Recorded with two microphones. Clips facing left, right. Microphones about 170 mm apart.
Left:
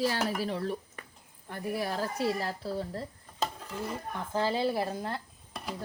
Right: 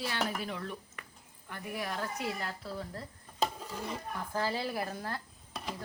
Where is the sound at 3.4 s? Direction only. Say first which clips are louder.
Even; centre (ahead or behind).